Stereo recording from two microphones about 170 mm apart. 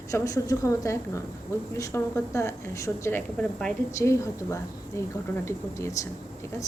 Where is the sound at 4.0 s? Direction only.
15° left (ahead or behind).